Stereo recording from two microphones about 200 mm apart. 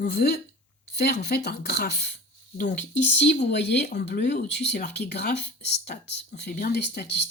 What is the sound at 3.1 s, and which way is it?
Speech, 55° left (ahead or behind).